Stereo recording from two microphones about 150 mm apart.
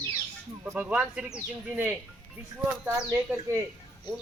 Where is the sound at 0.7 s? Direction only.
10° right (ahead or behind).